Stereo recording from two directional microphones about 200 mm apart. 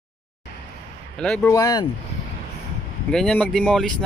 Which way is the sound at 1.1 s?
5° left (ahead or behind).